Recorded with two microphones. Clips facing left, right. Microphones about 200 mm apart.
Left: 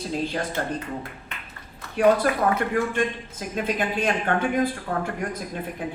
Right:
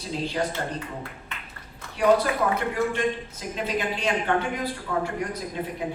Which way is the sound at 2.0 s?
50° left (ahead or behind).